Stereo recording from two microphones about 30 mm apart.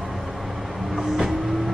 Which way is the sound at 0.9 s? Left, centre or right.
Centre.